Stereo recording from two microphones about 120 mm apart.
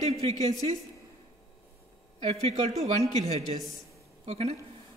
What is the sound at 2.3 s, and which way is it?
A man's voice, 65° right (ahead or behind).